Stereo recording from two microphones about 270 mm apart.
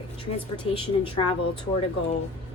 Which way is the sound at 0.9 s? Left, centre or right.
Centre.